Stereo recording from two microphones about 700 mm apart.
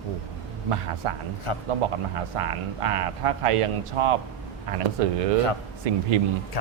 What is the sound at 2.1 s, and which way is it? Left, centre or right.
Speech, right.